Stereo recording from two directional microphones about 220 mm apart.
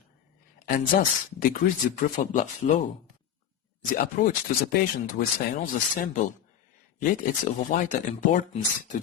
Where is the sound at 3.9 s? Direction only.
40° left (ahead or behind).